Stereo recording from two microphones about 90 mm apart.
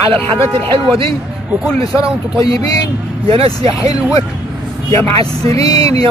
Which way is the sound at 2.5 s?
90° right.